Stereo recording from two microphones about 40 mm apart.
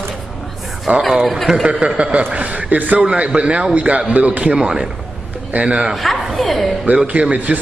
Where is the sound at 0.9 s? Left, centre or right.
Right.